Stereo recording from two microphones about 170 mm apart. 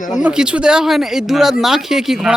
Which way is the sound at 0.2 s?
5° right (ahead or behind).